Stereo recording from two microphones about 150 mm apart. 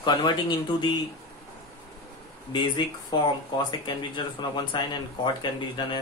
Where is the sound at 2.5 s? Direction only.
30° left (ahead or behind).